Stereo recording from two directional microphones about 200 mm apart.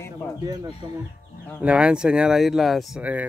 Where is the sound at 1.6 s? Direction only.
5° right (ahead or behind).